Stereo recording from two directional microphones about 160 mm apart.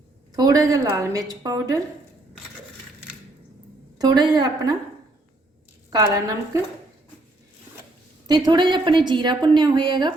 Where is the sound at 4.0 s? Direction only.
25° right (ahead or behind).